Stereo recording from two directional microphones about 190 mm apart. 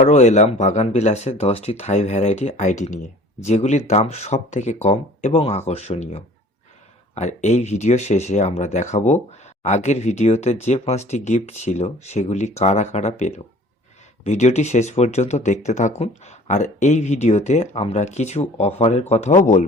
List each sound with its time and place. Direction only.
0.0 s speech: 40° left (ahead or behind)